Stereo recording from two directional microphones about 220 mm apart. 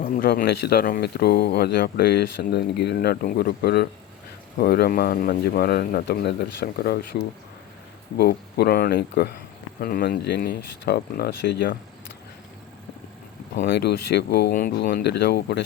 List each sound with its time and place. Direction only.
0.0 s speech: 40° left (ahead or behind)
8.2 s speech: 45° left (ahead or behind)
13.6 s speech: 50° left (ahead or behind)